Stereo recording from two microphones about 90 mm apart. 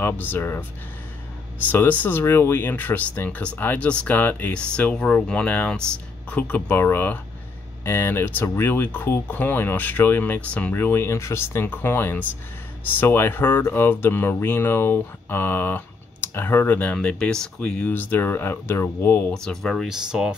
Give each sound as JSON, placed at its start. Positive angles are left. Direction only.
{"t": 0.0, "sound": "speech", "side_deg": 20}
{"t": 1.7, "sound": "speech", "side_deg": 20}
{"t": 19.3, "sound": "speech", "side_deg": 5}
{"t": 19.9, "sound": "speech", "side_deg": -10}